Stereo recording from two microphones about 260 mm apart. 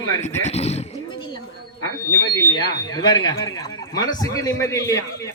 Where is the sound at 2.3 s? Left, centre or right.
Centre.